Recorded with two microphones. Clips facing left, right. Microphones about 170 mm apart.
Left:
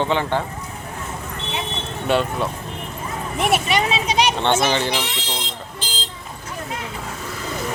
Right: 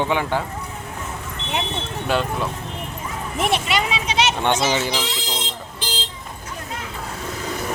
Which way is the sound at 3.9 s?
35° left (ahead or behind).